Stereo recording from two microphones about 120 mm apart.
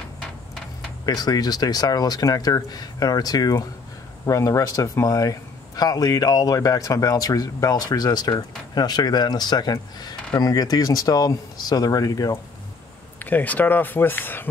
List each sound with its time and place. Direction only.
1.0 s speech: 35° left (ahead or behind)
13.2 s speech: 15° left (ahead or behind)